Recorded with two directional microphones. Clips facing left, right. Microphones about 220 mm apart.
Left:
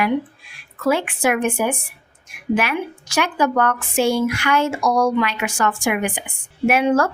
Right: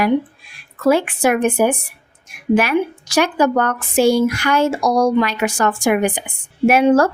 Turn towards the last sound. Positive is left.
turn(degrees=-35)  # may be behind; listen again after turning